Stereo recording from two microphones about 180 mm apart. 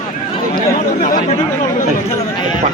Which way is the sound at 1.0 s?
45° left (ahead or behind).